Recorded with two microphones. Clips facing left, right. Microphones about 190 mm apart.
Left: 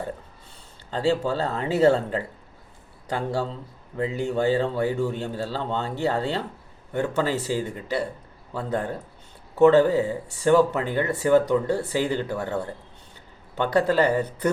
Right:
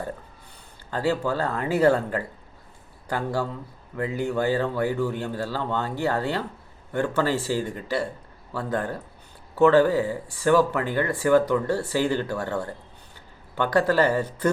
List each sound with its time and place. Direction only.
0.9 s speech: 25° left (ahead or behind)